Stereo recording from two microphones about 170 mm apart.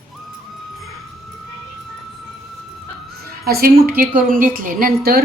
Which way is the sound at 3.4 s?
65° right (ahead or behind).